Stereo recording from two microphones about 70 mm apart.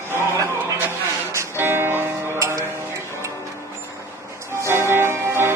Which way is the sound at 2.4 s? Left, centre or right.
Right.